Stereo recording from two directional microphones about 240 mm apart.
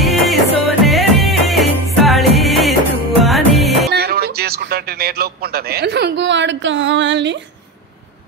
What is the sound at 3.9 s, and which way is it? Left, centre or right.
Speech, right.